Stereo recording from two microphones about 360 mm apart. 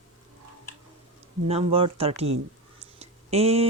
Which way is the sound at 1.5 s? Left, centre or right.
Centre.